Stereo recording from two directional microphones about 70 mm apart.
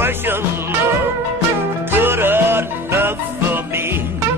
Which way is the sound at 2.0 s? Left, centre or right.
Right.